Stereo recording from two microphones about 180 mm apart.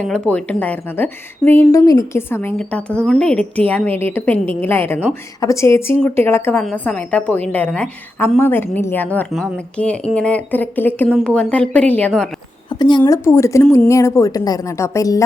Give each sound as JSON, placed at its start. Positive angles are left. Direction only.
{"t": 0.1, "sound": "a woman's voice", "side_deg": 10}